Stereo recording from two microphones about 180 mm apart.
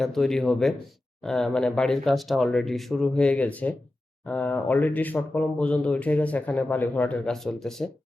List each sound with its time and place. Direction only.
0.0 s speech: centre (ahead or behind)